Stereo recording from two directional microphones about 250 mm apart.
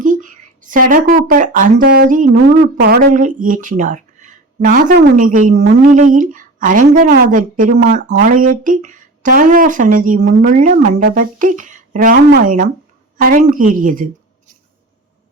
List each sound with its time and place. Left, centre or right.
0.0 s a woman's voice: right